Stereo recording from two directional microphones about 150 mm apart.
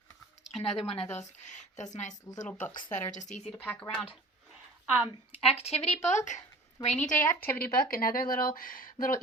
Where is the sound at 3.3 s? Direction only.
50° left (ahead or behind).